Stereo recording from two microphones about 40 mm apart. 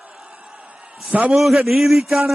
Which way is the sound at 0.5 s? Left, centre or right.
Right.